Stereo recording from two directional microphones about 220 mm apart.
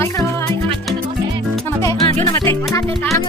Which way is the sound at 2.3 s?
15° left (ahead or behind).